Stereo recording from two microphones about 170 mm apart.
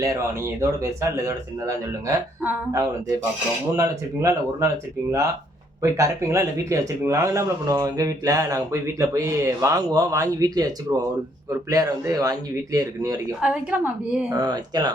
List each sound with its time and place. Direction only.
0.0 s a woman's voice: 15° right (ahead or behind)
5.8 s speech: 15° right (ahead or behind)
13.4 s a woman's voice: 5° right (ahead or behind)
14.3 s speech: 25° right (ahead or behind)